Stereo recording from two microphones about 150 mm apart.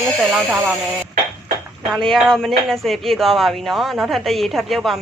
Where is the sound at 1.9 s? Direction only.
5° left (ahead or behind).